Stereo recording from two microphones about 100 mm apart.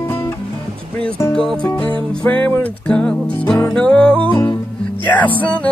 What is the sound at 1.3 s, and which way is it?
Music, 10° left (ahead or behind).